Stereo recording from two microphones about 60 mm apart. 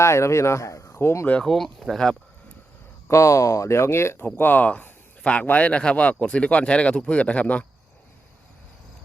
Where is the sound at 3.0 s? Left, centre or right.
Left.